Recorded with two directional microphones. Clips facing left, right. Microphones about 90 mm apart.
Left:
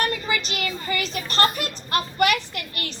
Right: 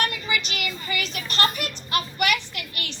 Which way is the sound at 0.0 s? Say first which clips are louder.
Left 2 dB; 35° left (ahead or behind).